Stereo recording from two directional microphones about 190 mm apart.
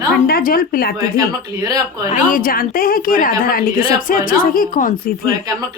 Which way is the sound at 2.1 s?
45° left (ahead or behind).